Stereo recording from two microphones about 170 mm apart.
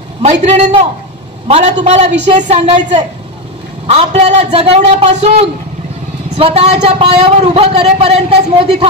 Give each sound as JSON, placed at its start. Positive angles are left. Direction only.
{"t": 0.2, "sound": "speech", "side_deg": -40}